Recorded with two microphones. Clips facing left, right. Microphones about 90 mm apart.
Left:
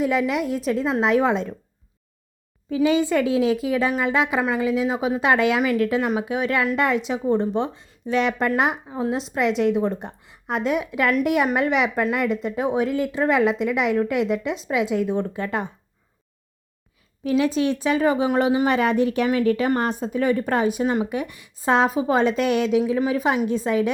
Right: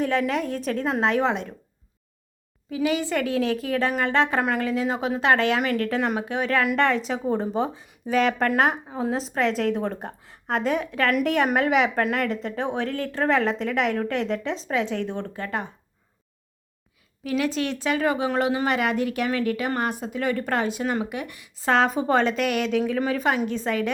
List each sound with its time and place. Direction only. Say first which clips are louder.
0.1 s speech: left 2 dB; 10° left (ahead or behind)
1.2 s a woman's voice: left 3 dB; 20° left (ahead or behind)
2.6 s a woman's voice: left 5 dB; 30° left (ahead or behind)
5.9 s a woman's voice: left 3 dB; 5° left (ahead or behind); by 15.7 s 20° left (ahead or behind)
17.2 s a woman's voice: left 5 dB; 25° left (ahead or behind)
20.4 s a woman's voice: left 4 dB; 15° left (ahead or behind)
21.8 s a woman's voice: left 1 dB; 5° left (ahead or behind)
22.2 s a woman's voice: left 3 dB; 20° left (ahead or behind)